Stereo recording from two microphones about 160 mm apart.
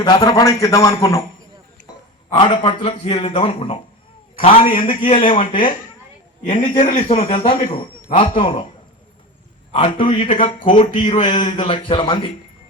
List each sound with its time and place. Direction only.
0.0 s a man's voice: 25° left (ahead or behind)
2.3 s a man's voice: 30° left (ahead or behind)
6.7 s a man's voice: 45° left (ahead or behind)
9.7 s a man's voice: 30° left (ahead or behind)